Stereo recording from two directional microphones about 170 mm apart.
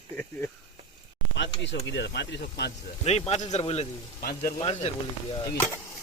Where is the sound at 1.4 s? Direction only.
90° left.